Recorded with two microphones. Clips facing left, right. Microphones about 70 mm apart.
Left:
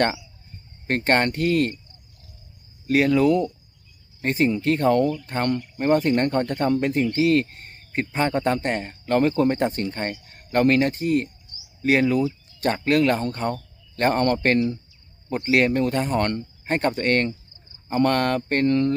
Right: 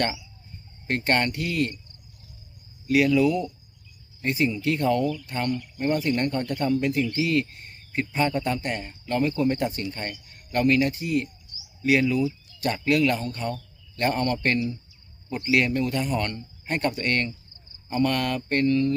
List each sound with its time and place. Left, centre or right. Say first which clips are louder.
0.9 s speech: left 3 dB; left
2.8 s speech: left 2 dB; left